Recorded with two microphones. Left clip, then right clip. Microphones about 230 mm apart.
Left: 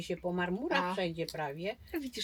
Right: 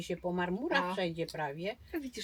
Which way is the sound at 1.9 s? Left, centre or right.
Centre.